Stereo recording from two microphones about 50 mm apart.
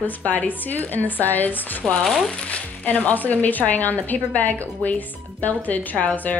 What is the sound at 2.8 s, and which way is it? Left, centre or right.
A woman's voice, left.